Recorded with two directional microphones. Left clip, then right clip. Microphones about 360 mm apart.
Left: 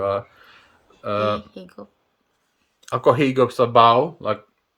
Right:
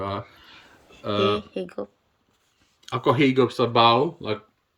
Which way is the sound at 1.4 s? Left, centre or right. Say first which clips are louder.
Right 8 dB; centre.